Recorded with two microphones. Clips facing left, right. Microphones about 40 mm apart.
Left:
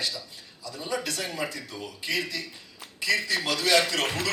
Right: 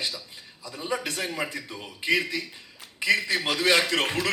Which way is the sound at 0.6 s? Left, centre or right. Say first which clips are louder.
Right 1 dB; right.